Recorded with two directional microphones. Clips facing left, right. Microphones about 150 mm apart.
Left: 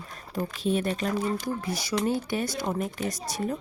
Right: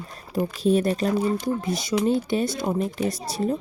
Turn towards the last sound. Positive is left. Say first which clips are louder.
# right 5 dB
turn(degrees=-30)  # may be behind; listen again after turning